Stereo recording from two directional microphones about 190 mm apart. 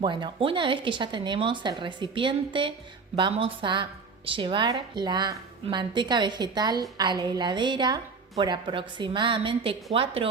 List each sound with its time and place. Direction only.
0.0 s a woman's voice: 25° right (ahead or behind)